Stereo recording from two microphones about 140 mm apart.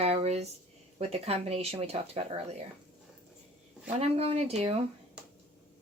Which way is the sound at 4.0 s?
45° right (ahead or behind).